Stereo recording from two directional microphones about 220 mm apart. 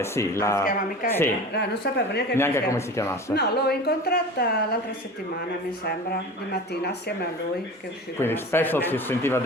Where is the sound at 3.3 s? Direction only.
45° left (ahead or behind).